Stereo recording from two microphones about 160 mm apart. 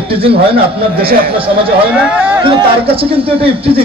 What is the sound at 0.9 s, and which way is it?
Speech, 70° right (ahead or behind).